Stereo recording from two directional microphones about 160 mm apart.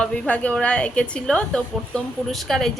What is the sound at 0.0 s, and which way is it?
A woman's voice, 10° left (ahead or behind).